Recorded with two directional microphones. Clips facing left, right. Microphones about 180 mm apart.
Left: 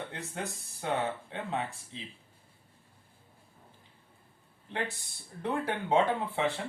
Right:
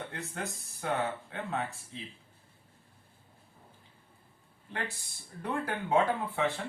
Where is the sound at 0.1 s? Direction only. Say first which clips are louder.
Even; 20° left (ahead or behind).